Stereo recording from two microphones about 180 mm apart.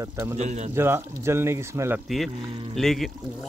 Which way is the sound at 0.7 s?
15° right (ahead or behind).